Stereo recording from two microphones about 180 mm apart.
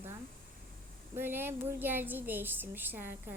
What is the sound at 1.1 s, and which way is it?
A woman's voice, 10° right (ahead or behind).